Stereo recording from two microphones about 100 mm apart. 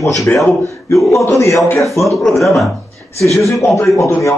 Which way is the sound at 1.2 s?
30° left (ahead or behind).